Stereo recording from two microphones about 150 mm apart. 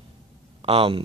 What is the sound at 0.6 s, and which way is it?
Speech, 40° right (ahead or behind).